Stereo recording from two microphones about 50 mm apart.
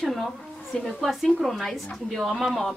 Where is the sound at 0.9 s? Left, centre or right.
Centre.